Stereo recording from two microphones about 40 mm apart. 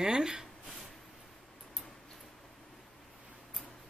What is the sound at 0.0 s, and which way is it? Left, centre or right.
Speech, centre.